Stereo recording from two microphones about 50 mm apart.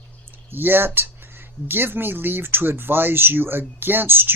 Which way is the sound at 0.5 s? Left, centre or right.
Right.